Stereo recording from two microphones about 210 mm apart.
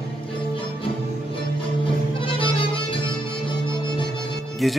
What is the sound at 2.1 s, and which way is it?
Music, 25° left (ahead or behind).